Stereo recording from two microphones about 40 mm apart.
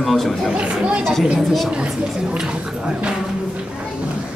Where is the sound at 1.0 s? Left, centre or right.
Centre.